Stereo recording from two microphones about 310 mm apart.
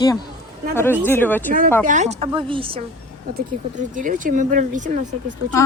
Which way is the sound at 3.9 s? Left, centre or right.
Right.